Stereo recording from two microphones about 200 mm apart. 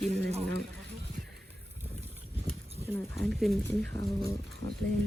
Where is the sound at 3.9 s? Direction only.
15° left (ahead or behind).